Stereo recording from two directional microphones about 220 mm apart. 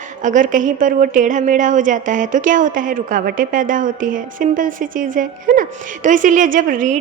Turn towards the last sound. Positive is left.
turn(degrees=-35)  # may be behind; listen again after turning